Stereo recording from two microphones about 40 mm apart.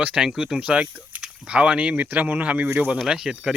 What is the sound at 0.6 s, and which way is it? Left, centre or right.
Speech, right.